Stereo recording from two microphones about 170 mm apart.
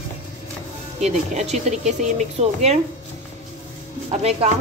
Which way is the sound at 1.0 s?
40° right (ahead or behind).